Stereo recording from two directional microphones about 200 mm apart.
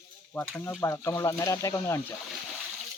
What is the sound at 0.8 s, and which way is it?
Speech, 15° left (ahead or behind).